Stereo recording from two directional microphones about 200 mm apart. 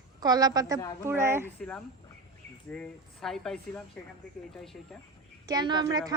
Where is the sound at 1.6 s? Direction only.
5° left (ahead or behind).